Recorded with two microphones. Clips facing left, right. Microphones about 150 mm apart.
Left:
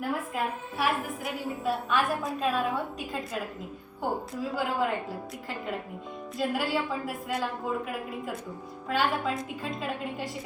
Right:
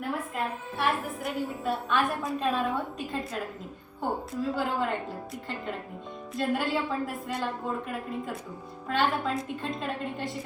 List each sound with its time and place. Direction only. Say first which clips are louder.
0.0 s a woman's voice: left 1 dB; 5° left (ahead or behind)